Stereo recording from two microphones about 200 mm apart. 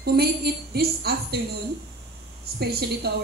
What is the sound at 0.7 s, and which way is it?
Speech, 50° right (ahead or behind).